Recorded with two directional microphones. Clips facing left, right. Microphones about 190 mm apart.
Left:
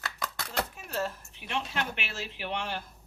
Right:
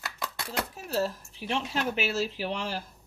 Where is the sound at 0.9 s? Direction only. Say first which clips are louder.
Right 4 dB; 35° right (ahead or behind).